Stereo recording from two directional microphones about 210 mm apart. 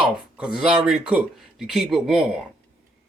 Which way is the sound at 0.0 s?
5° right (ahead or behind).